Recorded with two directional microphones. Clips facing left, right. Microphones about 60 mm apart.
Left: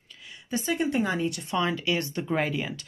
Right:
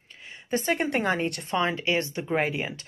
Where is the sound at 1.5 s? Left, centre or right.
Right.